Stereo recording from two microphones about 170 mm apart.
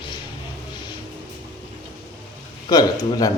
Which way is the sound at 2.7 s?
25° left (ahead or behind).